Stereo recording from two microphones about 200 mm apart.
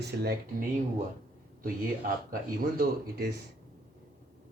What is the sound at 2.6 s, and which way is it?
Speech, 45° right (ahead or behind).